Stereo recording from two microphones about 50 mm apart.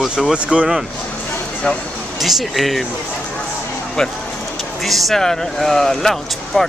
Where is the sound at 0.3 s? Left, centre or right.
Centre.